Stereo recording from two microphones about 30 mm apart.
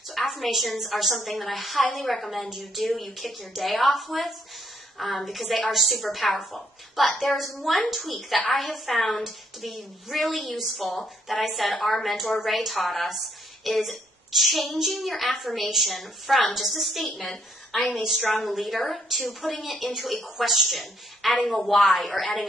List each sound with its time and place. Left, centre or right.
0.1 s a sound: centre
0.5 s a woman's voice: centre
13.7 s child singing: centre
14.9 s a woman's voice: centre